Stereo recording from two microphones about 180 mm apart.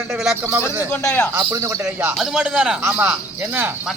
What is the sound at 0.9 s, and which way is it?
Speech, 10° left (ahead or behind).